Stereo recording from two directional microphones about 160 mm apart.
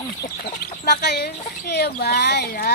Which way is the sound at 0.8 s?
85° left.